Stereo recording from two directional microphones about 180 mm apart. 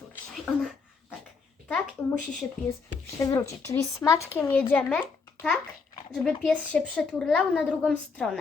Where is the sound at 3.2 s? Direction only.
15° left (ahead or behind).